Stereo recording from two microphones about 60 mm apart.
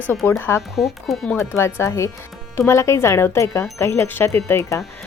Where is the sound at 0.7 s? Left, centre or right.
Centre.